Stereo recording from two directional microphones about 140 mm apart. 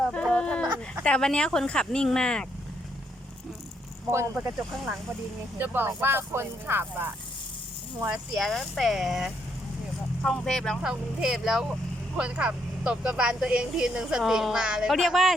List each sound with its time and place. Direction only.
0.1 s a sound: 5° left (ahead or behind)
1.0 s speech: 5° left (ahead or behind)
5.5 s speech: 15° right (ahead or behind)
8.4 s speech: centre (ahead or behind)